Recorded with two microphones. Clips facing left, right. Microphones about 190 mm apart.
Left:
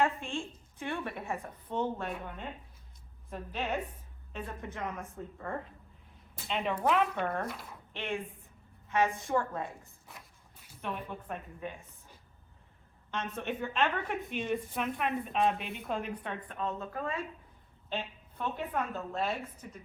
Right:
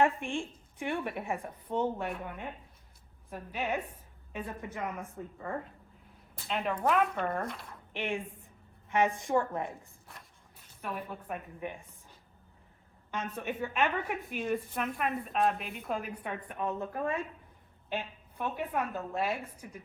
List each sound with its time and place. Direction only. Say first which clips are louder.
0.0 s a woman's voice: right 3 dB; 15° right (ahead or behind); by 7.8 s centre (ahead or behind)
7.9 s a woman's voice: right 2 dB; 15° right (ahead or behind)
10.1 s a sound: left 1 dB; centre (ahead or behind)
10.8 s a woman's voice: even; 5° right (ahead or behind)
11.6 s a woman's voice: right 2 dB; 15° right (ahead or behind)
13.1 s a woman's voice: even; 5° right (ahead or behind)